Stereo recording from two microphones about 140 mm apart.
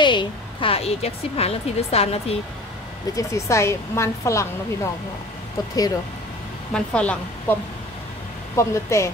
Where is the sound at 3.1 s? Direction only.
20° left (ahead or behind).